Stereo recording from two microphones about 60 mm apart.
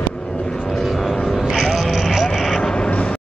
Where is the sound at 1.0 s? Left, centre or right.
Centre.